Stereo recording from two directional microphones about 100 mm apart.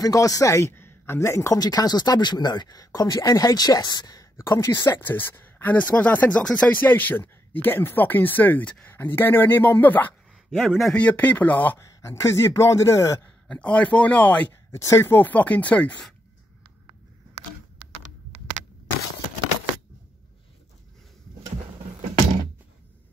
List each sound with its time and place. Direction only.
0.0 s speech: 35° left (ahead or behind)
4.8 s speech: 20° left (ahead or behind)
10.3 s a man's voice: centre (ahead or behind); by 11.8 s 15° left (ahead or behind)
11.8 s speech: 30° left (ahead or behind)
13.5 s speech: 10° left (ahead or behind)
14.7 s speech: 30° left (ahead or behind); by 16.1 s 15° left (ahead or behind)